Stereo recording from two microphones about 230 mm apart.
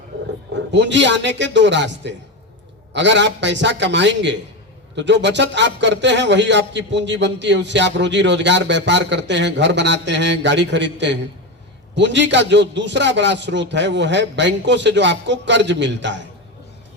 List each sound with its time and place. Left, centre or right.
0.7 s a man's voice: right